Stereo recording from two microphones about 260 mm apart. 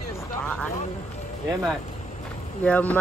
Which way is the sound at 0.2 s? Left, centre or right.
Centre.